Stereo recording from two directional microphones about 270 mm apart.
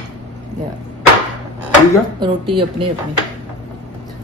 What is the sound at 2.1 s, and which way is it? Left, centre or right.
Speech, centre.